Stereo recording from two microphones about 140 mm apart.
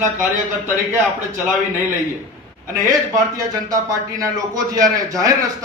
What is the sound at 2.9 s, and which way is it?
A man's voice, 25° right (ahead or behind).